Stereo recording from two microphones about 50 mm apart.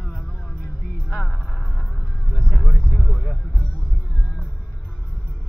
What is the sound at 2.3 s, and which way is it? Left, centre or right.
Vehicle, centre.